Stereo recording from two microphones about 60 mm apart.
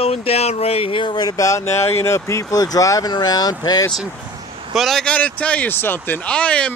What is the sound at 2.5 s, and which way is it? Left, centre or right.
Speech, left.